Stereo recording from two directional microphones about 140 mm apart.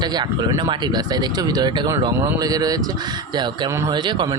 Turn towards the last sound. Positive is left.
turn(degrees=-35)  # may be behind; listen again after turning